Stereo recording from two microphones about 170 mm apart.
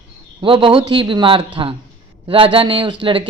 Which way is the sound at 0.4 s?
30° right (ahead or behind).